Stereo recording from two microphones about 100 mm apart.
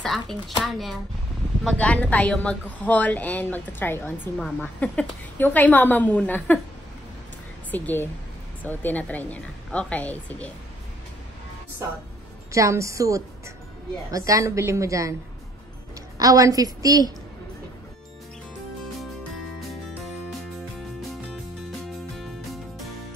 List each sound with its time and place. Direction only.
0.6 s speech: centre (ahead or behind)
1.8 s speech: 15° left (ahead or behind)
7.7 s speech: 20° left (ahead or behind)
12.5 s a woman's voice: 30° right (ahead or behind)
16.2 s a woman's voice: 35° right (ahead or behind)
22.1 s music: centre (ahead or behind)